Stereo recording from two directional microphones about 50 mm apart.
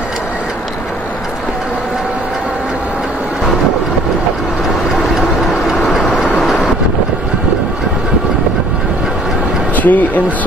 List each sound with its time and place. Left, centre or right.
5.2 s vehicle: centre
6.1 s vehicle: left
6.4 s vehicle: centre
9.8 s speech: left